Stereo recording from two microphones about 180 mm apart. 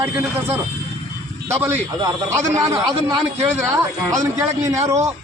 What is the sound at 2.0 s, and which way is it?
A man's voice, 15° right (ahead or behind).